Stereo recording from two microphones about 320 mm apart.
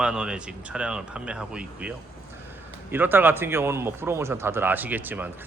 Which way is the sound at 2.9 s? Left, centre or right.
Centre.